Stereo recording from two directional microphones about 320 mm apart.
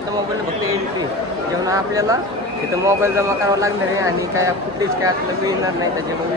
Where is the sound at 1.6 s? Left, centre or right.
Centre.